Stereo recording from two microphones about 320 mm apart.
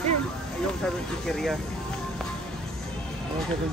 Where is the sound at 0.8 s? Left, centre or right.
Centre.